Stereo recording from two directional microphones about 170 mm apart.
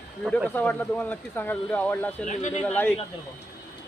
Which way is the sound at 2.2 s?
45° left (ahead or behind).